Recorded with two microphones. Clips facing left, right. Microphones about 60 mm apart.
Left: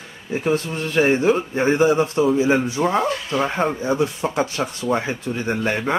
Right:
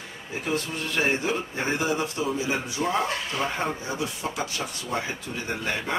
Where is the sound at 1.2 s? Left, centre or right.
Left.